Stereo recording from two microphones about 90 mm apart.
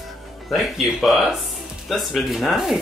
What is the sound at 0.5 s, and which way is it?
Speech, centre (ahead or behind).